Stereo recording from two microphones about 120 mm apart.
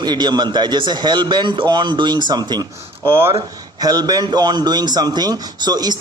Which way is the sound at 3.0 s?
20° right (ahead or behind).